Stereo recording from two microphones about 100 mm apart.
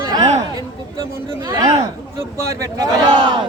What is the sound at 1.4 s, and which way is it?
Speech, 40° right (ahead or behind).